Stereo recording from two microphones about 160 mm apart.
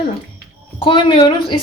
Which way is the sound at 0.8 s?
30° left (ahead or behind).